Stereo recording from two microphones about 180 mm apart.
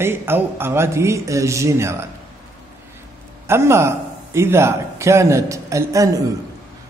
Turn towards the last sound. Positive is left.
turn(degrees=-20)  # may be behind; listen again after turning